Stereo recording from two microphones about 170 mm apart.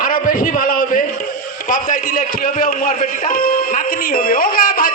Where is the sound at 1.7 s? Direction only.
55° left (ahead or behind).